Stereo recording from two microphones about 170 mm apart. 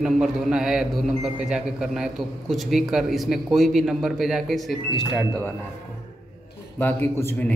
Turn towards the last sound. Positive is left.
turn(degrees=10)  # may be behind; listen again after turning